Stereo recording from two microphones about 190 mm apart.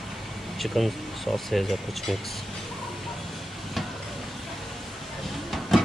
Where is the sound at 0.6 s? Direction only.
Centre (ahead or behind).